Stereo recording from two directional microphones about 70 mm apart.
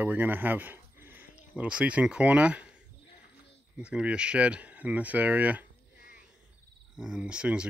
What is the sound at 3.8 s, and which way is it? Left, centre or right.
Speech, centre.